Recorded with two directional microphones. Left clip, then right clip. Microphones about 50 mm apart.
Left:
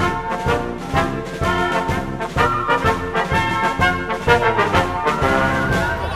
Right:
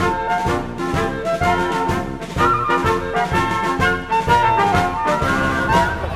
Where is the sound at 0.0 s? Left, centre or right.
Centre.